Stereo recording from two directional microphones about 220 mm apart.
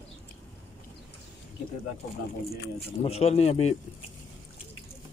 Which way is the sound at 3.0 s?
30° left (ahead or behind).